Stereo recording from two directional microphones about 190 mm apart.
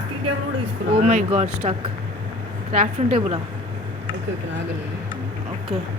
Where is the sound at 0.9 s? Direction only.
35° right (ahead or behind).